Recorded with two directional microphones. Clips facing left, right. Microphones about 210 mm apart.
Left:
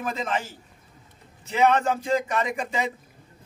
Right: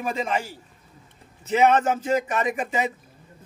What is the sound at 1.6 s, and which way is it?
Speech, 20° right (ahead or behind).